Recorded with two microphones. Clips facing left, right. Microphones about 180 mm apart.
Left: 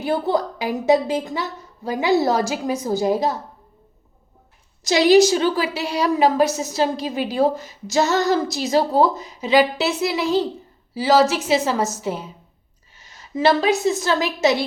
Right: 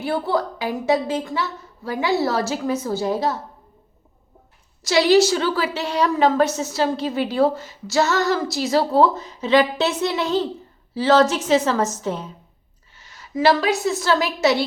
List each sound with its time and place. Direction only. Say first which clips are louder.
0.0 s a woman's voice: left 1 dB; 20° left (ahead or behind)
4.8 s a woman's voice: left 2 dB; 20° left (ahead or behind)
13.0 s a woman's voice: even; 20° left (ahead or behind)